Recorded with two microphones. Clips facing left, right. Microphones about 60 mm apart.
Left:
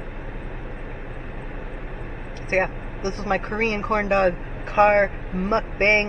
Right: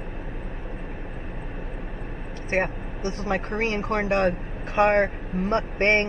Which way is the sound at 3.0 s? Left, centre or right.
Left.